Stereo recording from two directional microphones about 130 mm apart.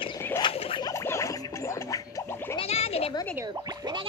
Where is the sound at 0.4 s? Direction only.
45° left (ahead or behind).